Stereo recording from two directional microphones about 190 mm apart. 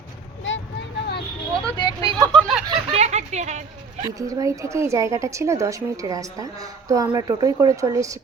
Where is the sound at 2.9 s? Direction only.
35° right (ahead or behind).